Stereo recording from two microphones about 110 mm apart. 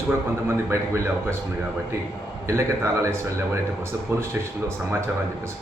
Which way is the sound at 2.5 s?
25° right (ahead or behind).